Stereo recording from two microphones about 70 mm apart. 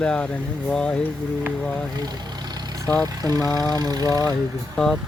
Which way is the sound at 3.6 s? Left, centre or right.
Right.